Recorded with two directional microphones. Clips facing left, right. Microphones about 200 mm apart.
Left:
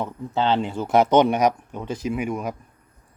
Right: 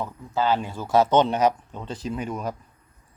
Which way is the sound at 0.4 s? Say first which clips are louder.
Left 2 dB; 25° left (ahead or behind).